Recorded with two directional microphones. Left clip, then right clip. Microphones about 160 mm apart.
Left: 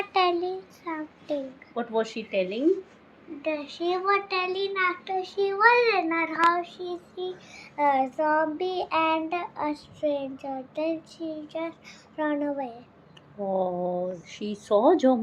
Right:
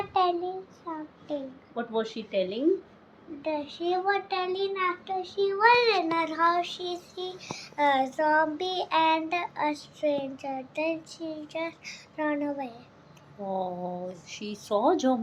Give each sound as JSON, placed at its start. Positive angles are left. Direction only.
{"t": 0.1, "sound": "a child's voice", "side_deg": 10}
{"t": 1.7, "sound": "speech", "side_deg": 30}
{"t": 3.4, "sound": "a child's voice", "side_deg": 0}
{"t": 5.5, "sound": "child singing", "side_deg": -10}
{"t": 13.5, "sound": "speech", "side_deg": 50}